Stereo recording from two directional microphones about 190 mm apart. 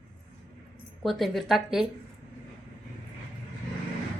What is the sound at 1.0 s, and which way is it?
Speech, centre (ahead or behind).